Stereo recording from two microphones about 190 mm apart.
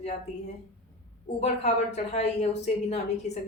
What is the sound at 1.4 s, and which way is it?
Speech, 35° left (ahead or behind).